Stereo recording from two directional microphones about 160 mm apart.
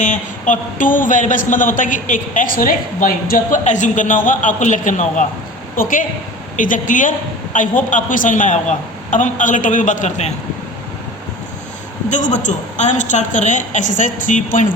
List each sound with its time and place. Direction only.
0.0 s a man's voice: 50° left (ahead or behind)
12.0 s a woman's voice: 50° left (ahead or behind)